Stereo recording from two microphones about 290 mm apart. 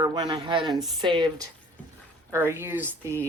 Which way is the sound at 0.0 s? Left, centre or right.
Centre.